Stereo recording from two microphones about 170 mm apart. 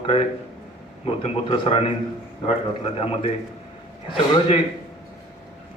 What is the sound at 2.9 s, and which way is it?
A man's voice, 35° left (ahead or behind).